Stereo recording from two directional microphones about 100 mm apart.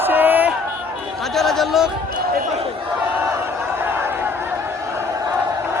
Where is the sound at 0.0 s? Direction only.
20° right (ahead or behind).